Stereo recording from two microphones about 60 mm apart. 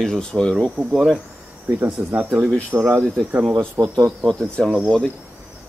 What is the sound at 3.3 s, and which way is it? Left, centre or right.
Speech, right.